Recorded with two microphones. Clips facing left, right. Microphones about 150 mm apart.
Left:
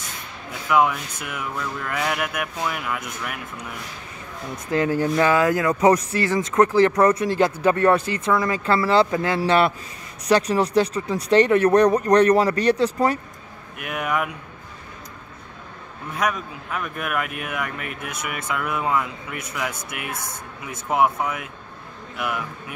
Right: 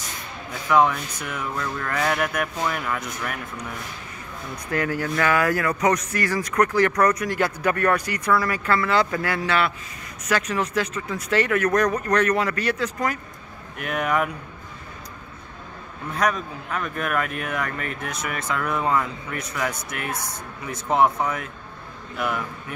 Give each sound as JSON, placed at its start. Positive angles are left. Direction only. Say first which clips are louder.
{"t": 0.7, "sound": "speech", "louder": "right 1 dB", "side_deg": 5}
{"t": 4.6, "sound": "speech", "louder": "left 4 dB", "side_deg": 20}
{"t": 9.4, "sound": "speech", "louder": "left 7 dB", "side_deg": 30}
{"t": 13.7, "sound": "speech", "louder": "right 2 dB", "side_deg": 5}
{"t": 16.2, "sound": "speech", "louder": "right 1 dB", "side_deg": 5}